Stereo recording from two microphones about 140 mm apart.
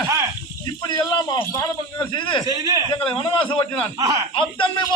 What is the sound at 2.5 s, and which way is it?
Speech, 25° right (ahead or behind).